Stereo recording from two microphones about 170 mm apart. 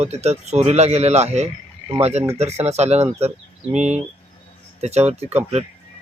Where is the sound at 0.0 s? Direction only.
40° right (ahead or behind).